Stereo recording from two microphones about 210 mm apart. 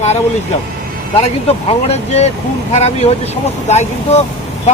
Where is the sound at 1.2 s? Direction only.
30° left (ahead or behind).